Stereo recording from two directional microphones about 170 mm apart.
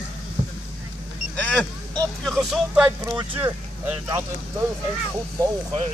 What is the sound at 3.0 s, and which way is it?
Speech, 15° right (ahead or behind).